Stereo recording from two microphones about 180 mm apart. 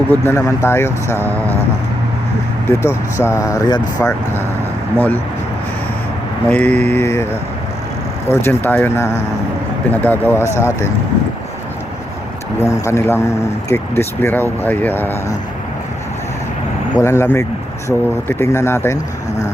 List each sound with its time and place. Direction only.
0.1 s speech: 15° left (ahead or behind)
2.6 s speech: 15° left (ahead or behind)
6.5 s speech: 5° left (ahead or behind)
8.3 s speech: 10° left (ahead or behind)
12.8 s speech: 15° left (ahead or behind)
17.0 s speech: 15° left (ahead or behind)